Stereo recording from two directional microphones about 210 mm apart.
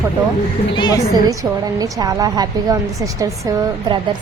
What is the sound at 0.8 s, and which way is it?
Speech, 20° left (ahead or behind).